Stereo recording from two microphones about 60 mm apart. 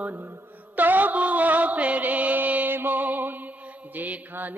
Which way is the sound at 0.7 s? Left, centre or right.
Right.